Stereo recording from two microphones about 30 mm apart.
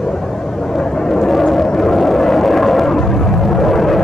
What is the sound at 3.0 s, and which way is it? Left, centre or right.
Vehicle, centre.